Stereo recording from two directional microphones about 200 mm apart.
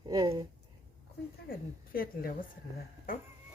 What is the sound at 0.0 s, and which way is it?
Speech, 20° right (ahead or behind).